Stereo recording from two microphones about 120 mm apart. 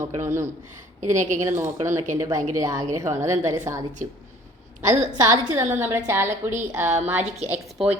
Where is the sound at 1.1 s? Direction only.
90° right.